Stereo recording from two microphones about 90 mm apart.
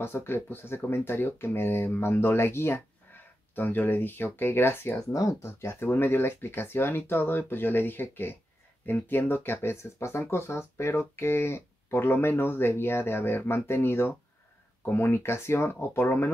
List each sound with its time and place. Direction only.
0.0 s speech: 25° left (ahead or behind)